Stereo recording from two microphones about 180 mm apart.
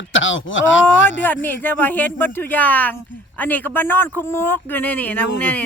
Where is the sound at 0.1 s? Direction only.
90° left.